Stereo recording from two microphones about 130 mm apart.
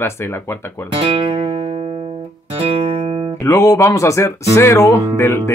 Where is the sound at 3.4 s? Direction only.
20° left (ahead or behind).